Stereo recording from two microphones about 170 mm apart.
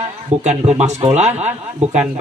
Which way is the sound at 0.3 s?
40° right (ahead or behind).